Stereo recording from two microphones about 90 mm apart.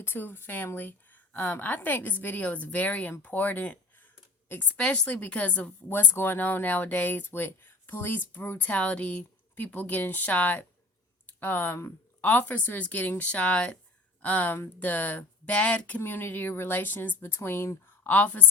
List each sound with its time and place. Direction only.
0.0 s a woman's voice: 25° left (ahead or behind)